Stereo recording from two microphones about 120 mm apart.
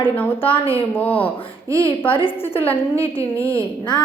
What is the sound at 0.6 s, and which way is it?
Speech, 50° left (ahead or behind).